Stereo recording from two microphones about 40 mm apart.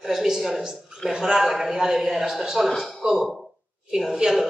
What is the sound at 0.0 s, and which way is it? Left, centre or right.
A man's voice, centre.